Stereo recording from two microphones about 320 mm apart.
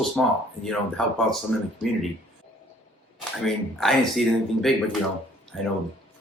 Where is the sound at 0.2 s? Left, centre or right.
Centre.